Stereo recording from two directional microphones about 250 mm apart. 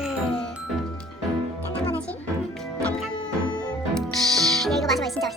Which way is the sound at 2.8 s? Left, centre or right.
Centre.